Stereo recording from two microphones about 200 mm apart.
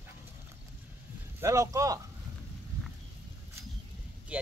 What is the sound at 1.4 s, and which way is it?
Speech, 15° right (ahead or behind).